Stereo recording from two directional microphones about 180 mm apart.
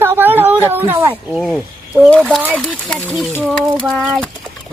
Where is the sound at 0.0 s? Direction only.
10° right (ahead or behind).